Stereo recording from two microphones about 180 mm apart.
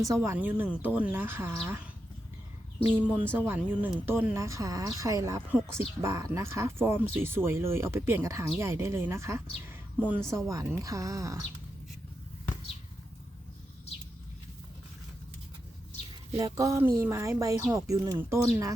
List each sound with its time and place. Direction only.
0.0 s speech: 15° right (ahead or behind)
2.8 s speech: 10° right (ahead or behind)
16.4 s speech: 15° right (ahead or behind)